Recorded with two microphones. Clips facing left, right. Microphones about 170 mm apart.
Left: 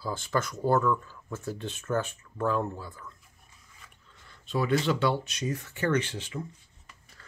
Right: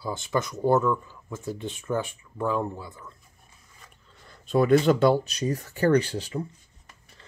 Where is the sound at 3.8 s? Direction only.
40° right (ahead or behind).